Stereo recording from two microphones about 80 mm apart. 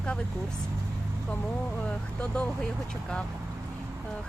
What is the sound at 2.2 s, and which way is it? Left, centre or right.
Speech, centre.